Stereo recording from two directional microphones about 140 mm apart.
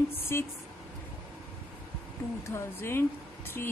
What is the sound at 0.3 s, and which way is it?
Speech, 20° left (ahead or behind).